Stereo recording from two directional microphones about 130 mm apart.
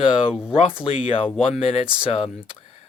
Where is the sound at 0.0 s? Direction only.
45° left (ahead or behind).